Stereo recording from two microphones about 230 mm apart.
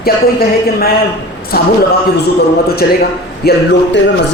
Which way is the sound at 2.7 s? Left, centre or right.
Left.